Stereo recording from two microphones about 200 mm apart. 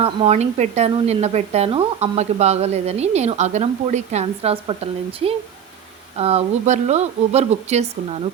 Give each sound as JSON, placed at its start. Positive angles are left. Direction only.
{"t": 0.0, "sound": "speech", "side_deg": -30}
{"t": 6.1, "sound": "speech", "side_deg": -30}